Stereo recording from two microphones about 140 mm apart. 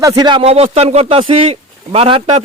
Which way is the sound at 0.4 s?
45° right (ahead or behind).